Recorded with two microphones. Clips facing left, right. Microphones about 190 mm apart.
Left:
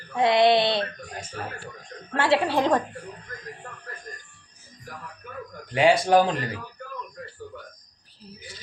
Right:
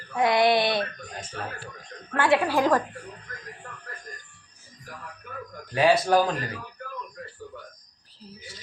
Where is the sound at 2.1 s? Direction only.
25° left (ahead or behind).